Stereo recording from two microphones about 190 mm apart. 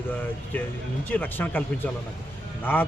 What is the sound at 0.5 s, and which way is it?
A man's voice, 10° left (ahead or behind).